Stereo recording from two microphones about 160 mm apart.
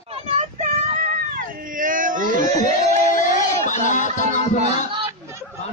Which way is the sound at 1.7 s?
55° right (ahead or behind).